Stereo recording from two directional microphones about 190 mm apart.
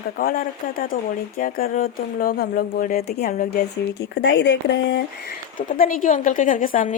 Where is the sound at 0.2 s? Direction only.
50° left (ahead or behind); by 5.3 s 65° left (ahead or behind).